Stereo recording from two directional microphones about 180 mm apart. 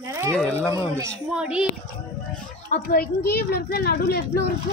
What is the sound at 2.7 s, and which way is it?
A woman's voice, 50° left (ahead or behind).